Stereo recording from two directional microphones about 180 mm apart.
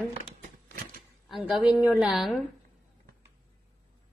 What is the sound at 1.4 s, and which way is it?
Speech, 10° right (ahead or behind).